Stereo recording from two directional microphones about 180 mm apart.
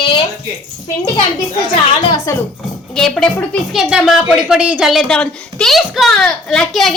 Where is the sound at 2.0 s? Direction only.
25° left (ahead or behind).